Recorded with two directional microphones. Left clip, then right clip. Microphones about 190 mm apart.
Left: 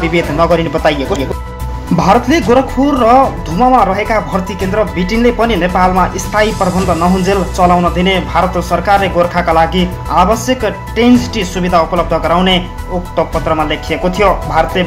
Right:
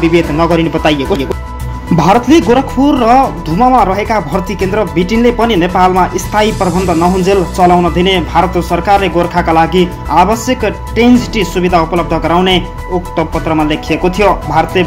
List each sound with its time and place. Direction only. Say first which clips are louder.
0.0 s speech: right 2 dB; 25° right (ahead or behind)